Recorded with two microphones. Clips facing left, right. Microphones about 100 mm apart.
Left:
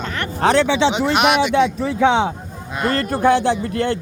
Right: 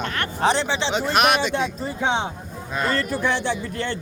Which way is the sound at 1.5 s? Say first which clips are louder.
Left 8 dB; 85° left.